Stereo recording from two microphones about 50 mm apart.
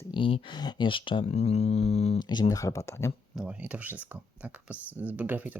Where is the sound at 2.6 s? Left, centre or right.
Left.